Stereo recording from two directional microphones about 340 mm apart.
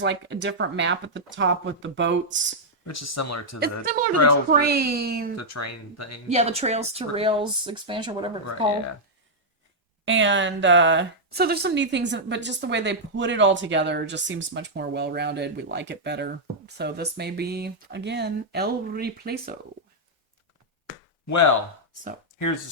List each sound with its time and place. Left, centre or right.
0.0 s speech: right
2.8 s speech: left
3.6 s a woman's voice: right
5.4 s speech: left
6.2 s speech: centre
10.1 s speech: right
21.2 s speech: left